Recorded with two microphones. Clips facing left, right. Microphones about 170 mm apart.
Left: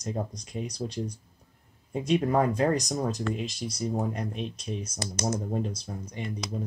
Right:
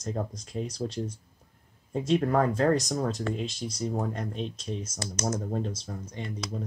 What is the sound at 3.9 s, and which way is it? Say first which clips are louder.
Speech: left 3 dB; 10° left (ahead or behind).